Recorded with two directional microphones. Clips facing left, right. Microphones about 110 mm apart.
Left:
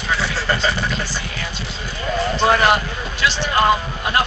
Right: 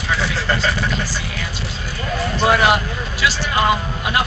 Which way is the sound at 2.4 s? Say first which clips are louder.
Right 1 dB; 5° right (ahead or behind).